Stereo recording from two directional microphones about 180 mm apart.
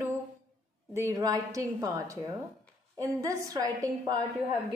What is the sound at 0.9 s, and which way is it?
Speech, 15° right (ahead or behind).